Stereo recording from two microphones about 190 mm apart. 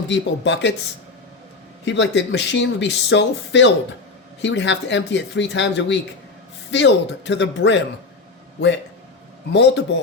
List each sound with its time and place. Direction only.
0.1 s speech: 70° left (ahead or behind)
1.8 s speech: 70° left (ahead or behind)
9.5 s speech: 65° left (ahead or behind)